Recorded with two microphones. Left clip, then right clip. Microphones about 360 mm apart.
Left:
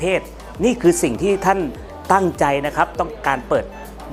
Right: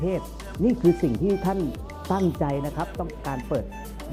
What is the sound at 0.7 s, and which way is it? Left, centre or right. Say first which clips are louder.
Speech: left 5 dB; left.